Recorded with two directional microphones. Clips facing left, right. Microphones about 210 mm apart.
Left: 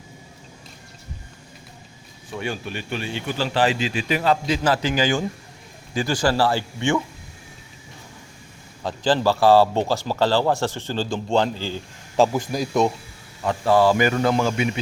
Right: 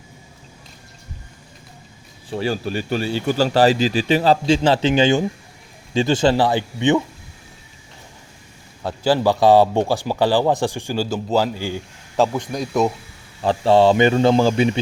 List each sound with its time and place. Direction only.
2.3 s a man's voice: 35° right (ahead or behind); by 7.0 s 20° right (ahead or behind)
8.8 s speech: 10° right (ahead or behind)
12.1 s speech: 5° left (ahead or behind)
13.4 s a man's voice: 30° right (ahead or behind)